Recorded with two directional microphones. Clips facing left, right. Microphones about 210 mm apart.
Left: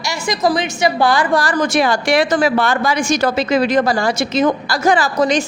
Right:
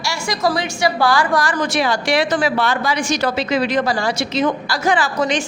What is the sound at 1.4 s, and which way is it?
A woman's voice, 40° left (ahead or behind).